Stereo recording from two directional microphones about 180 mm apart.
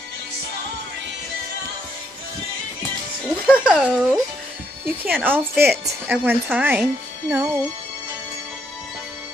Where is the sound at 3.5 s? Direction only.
5° right (ahead or behind).